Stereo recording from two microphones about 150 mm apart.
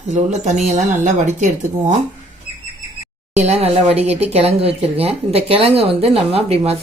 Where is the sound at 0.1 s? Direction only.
50° right (ahead or behind).